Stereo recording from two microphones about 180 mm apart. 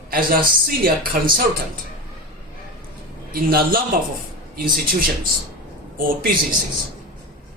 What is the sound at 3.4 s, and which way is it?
Speech, 55° right (ahead or behind).